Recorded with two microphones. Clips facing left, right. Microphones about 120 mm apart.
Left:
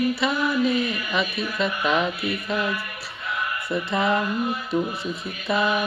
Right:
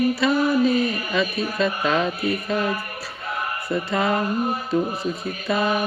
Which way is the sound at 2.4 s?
40° right (ahead or behind).